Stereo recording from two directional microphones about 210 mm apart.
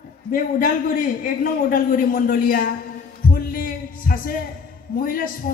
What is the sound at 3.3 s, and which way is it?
Heart sounds, 45° left (ahead or behind).